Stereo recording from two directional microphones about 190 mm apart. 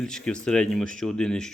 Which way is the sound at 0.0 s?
5° left (ahead or behind).